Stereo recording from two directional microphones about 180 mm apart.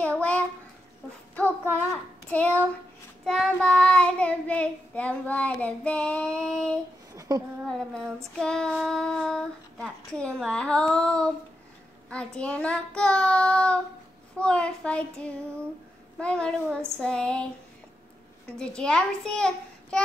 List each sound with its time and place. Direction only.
0.0 s a sound: 5° left (ahead or behind)
1.6 s a child's voice: 10° right (ahead or behind)
2.2 s child singing: 5° left (ahead or behind)
7.2 s a sound: 20° right (ahead or behind)
7.7 s child singing: 5° left (ahead or behind)
18.8 s child singing: 5° left (ahead or behind)